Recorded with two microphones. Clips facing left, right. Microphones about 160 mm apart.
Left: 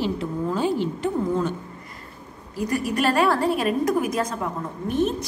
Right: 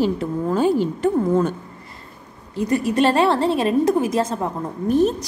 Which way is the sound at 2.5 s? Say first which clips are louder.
Right 5 dB; 25° right (ahead or behind).